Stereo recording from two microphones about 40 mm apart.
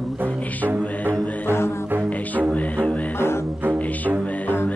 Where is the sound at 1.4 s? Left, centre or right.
Left.